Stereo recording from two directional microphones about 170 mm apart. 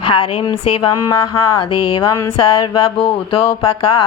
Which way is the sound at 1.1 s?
20° left (ahead or behind).